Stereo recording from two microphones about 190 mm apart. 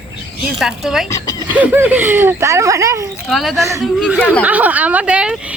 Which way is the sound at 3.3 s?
Centre (ahead or behind).